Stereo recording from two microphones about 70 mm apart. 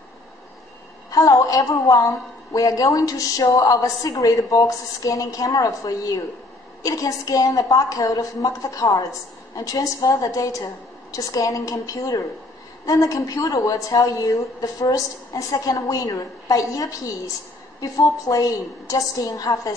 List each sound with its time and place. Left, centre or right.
1.1 s a woman's voice: left